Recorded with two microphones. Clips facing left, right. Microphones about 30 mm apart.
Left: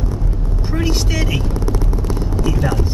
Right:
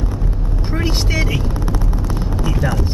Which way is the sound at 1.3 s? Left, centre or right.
Centre.